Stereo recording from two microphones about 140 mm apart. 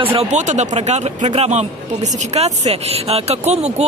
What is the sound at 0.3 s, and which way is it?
Speech, 55° right (ahead or behind).